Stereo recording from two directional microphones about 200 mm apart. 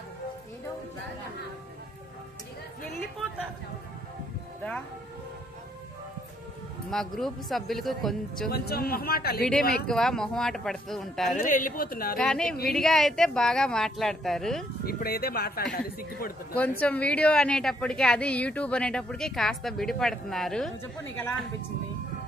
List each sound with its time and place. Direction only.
6.9 s a woman's voice: centre (ahead or behind)
8.5 s speech: 50° left (ahead or behind)
9.4 s a woman's voice: 5° left (ahead or behind)
11.3 s speech: 40° left (ahead or behind)
12.2 s a woman's voice: 5° left (ahead or behind)
14.9 s speech: 50° left (ahead or behind)
16.5 s a woman's voice: 10° left (ahead or behind)